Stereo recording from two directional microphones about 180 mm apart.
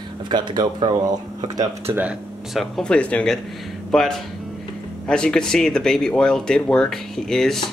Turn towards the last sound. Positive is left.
turn(degrees=0)  # may be behind; listen again after turning